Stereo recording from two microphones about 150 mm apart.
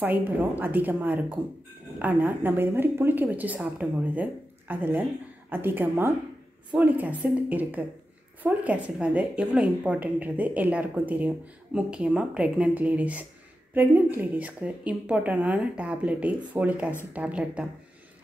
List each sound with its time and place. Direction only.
0.0 s a woman's voice: 15° right (ahead or behind)